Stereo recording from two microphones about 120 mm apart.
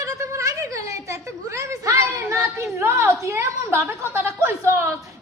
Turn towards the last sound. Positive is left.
turn(degrees=-20)  # may be behind; listen again after turning